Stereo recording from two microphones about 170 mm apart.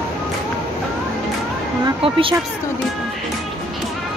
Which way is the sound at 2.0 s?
30° right (ahead or behind).